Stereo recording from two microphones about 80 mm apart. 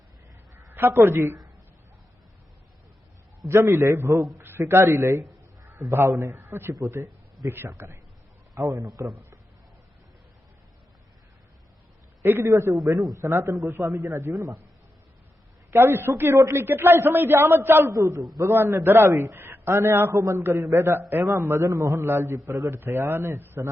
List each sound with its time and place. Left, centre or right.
0.5 s a woman's voice: right
3.4 s a man's voice: right
12.2 s a man's voice: right
14.3 s a man's voice: right
15.7 s a man's voice: right
21.1 s a man's voice: right
22.0 s a man's voice: right